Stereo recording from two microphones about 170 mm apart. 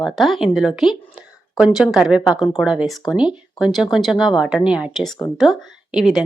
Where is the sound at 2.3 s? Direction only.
20° left (ahead or behind).